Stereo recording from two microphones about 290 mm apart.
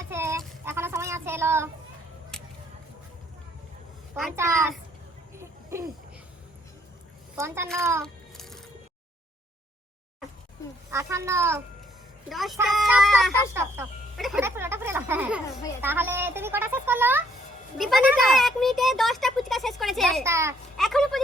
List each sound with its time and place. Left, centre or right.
0.0 s child singing: centre
2.3 s a sound: centre
4.1 s a child's voice: centre
5.7 s a sound: centre
7.3 s a child's voice: centre
8.0 s music: centre
10.9 s a child's voice: centre
20.2 s a child's voice: centre
20.7 s speech: centre